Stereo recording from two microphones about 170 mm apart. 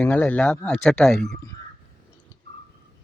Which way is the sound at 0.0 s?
10° left (ahead or behind).